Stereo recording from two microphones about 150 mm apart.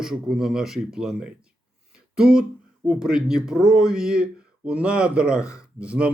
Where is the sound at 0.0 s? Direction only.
5° right (ahead or behind).